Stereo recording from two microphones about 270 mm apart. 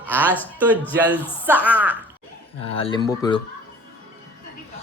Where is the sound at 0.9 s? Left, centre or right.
Centre.